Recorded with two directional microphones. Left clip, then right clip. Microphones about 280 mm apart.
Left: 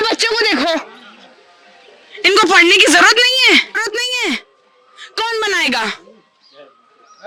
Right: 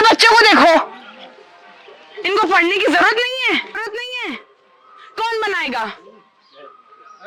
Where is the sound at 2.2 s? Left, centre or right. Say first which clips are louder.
Left 5 dB; left.